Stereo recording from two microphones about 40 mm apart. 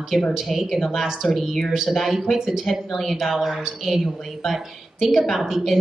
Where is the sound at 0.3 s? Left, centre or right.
Centre.